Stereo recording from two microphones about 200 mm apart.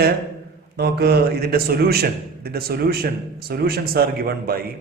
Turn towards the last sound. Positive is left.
turn(degrees=-50)  # may be behind; listen again after turning